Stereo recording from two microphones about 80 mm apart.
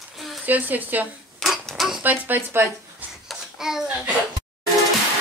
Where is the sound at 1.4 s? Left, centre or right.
Centre.